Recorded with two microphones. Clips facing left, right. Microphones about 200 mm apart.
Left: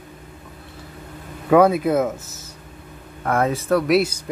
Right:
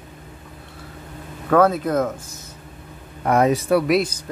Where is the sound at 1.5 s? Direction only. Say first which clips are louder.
Left 2 dB; 10° left (ahead or behind).